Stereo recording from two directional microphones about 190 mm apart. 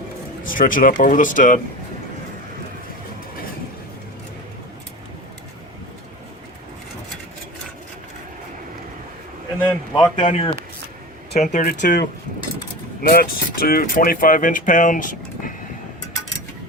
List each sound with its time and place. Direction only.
0.4 s speech: 45° left (ahead or behind)
9.6 s a man's voice: 20° left (ahead or behind)
11.3 s speech: 45° left (ahead or behind)